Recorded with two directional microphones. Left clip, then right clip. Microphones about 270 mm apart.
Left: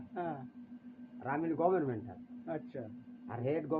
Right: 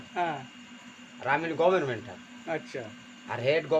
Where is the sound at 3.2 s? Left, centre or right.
Centre.